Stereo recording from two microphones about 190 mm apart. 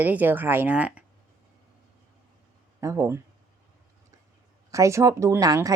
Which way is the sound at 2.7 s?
15° right (ahead or behind).